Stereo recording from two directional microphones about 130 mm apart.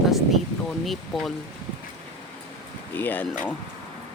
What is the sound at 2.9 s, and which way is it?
Speech, 15° left (ahead or behind).